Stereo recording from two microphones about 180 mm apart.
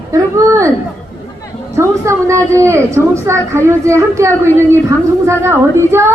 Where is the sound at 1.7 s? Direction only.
15° right (ahead or behind).